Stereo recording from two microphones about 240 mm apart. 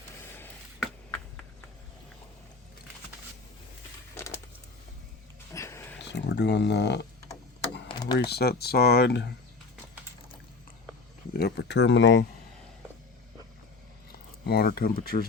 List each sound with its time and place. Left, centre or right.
0.3 s a sound: centre
5.5 s a sound: centre
6.0 s speech: left
7.9 s typing: centre
8.2 s speech: left
11.3 s speech: left
14.1 s speech: left